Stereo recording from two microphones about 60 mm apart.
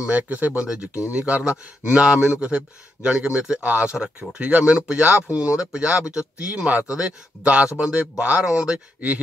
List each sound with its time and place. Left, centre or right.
0.0 s speech: right
0.6 s speech: centre